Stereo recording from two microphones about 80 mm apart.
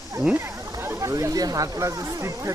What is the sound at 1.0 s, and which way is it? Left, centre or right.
Speech, right.